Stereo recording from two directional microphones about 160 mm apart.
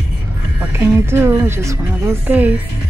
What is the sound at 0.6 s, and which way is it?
A woman's voice, 15° right (ahead or behind).